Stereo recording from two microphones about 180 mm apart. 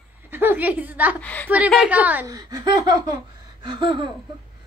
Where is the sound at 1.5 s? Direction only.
5° right (ahead or behind).